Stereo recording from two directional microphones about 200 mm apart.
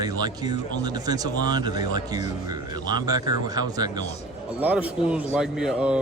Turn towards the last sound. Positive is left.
turn(degrees=-5)  # may be behind; listen again after turning